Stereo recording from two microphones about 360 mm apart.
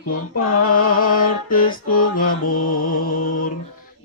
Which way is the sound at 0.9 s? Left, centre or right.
Left.